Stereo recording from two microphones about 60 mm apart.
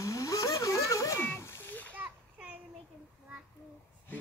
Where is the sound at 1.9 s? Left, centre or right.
Right.